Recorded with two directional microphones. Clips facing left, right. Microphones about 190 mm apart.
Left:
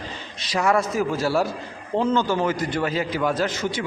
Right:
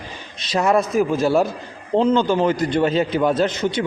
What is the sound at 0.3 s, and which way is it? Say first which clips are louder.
A man's voice: right 3 dB; 20° right (ahead or behind).